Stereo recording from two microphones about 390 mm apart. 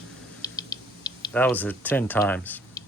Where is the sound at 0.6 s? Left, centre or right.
Centre.